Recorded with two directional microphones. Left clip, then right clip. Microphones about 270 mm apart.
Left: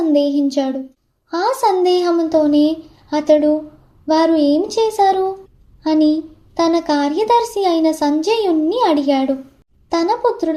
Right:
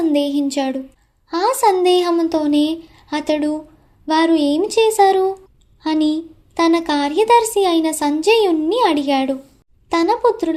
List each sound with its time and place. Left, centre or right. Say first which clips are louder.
0.1 s speech: left 3 dB; right